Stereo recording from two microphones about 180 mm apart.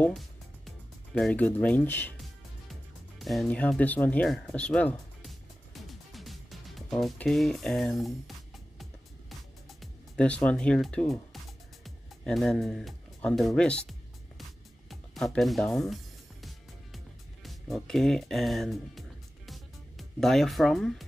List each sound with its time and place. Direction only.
0.0 s music: centre (ahead or behind)
9.7 s speech: 5° left (ahead or behind)
14.9 s music: centre (ahead or behind)